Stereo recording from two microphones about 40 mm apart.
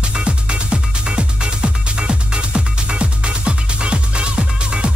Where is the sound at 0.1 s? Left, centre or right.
Right.